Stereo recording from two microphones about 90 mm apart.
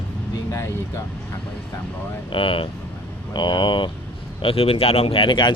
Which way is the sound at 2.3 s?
75° left (ahead or behind).